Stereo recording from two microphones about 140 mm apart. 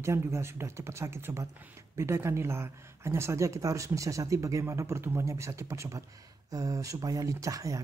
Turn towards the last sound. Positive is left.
turn(degrees=-25)  # may be behind; listen again after turning